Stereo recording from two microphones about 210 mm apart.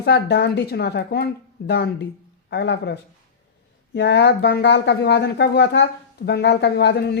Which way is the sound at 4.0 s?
55° left (ahead or behind).